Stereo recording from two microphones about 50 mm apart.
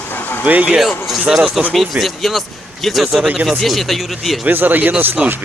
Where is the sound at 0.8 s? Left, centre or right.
Centre.